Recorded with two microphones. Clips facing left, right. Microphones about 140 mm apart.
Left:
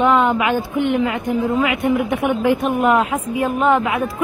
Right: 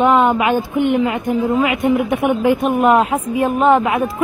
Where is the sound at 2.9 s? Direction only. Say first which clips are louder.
Right 3 dB; 30° right (ahead or behind).